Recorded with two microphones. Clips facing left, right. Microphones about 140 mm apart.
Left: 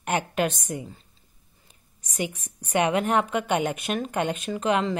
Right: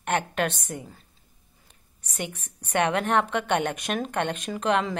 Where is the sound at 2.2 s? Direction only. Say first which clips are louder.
Left 4 dB; 5° left (ahead or behind).